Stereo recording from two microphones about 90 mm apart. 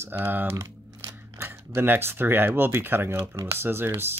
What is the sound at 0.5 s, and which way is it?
Crumpling, 35° right (ahead or behind).